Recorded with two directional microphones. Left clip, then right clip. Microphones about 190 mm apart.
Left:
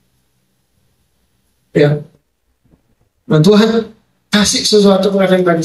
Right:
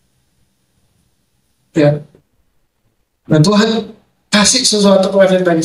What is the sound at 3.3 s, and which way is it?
Speech, 10° right (ahead or behind).